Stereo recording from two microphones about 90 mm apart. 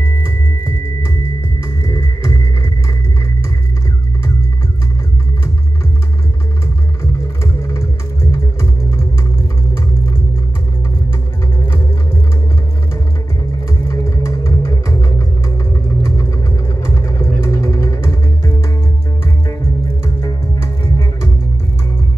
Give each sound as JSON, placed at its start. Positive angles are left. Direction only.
{"t": 1.9, "sound": "music", "side_deg": 40}
{"t": 7.6, "sound": "music", "side_deg": 35}
{"t": 13.8, "sound": "music", "side_deg": 35}
{"t": 16.8, "sound": "vehicle", "side_deg": 35}